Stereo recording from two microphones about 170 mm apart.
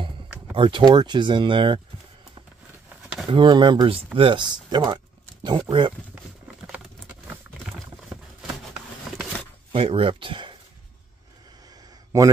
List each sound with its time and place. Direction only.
0.6 s speech: 30° right (ahead or behind)
3.3 s speech: 30° right (ahead or behind)
9.7 s speech: 35° right (ahead or behind)